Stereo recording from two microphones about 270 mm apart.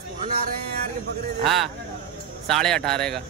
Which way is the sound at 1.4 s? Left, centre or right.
Centre.